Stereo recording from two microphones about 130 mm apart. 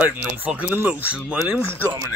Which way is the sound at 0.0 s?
10° right (ahead or behind).